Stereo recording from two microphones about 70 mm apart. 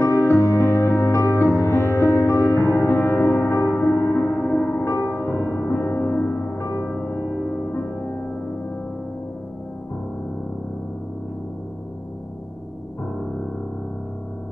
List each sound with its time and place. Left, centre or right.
0.0 s music: left